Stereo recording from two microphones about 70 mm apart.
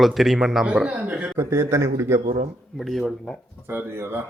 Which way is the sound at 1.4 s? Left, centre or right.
Right.